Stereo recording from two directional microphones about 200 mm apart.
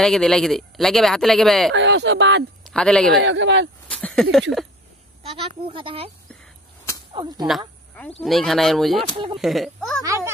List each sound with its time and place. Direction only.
0.0 s speech: 5° left (ahead or behind)
1.7 s speech: 65° right (ahead or behind)
2.6 s speech: 5° left (ahead or behind)
3.2 s speech: 65° right (ahead or behind)
3.9 s speech: 5° left (ahead or behind)
5.2 s speech: 30° right (ahead or behind)
7.4 s a woman's voice: 5° left (ahead or behind)
9.1 s speech: 25° right (ahead or behind)
9.4 s speech: centre (ahead or behind)
10.0 s a child's voice: 15° right (ahead or behind)